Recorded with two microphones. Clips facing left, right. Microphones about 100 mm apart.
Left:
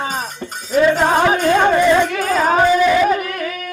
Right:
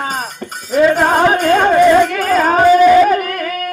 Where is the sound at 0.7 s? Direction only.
50° right (ahead or behind).